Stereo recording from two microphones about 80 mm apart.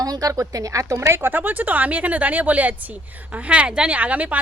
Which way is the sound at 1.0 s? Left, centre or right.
Right.